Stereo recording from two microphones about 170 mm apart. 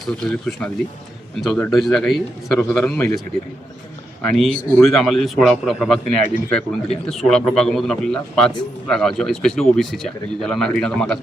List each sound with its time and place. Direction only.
0.0 s speech: 5° left (ahead or behind)
4.2 s speech: 5° left (ahead or behind)